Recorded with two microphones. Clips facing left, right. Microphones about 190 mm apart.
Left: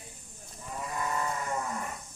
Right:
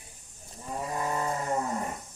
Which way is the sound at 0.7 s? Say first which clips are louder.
Right 3 dB; 30° right (ahead or behind).